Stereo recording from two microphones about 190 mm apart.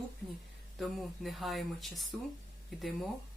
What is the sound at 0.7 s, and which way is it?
Speech, centre (ahead or behind).